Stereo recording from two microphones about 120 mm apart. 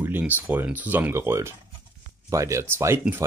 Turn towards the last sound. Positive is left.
turn(degrees=-20)  # may be behind; listen again after turning